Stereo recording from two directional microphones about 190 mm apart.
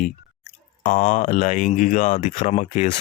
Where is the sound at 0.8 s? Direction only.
40° left (ahead or behind).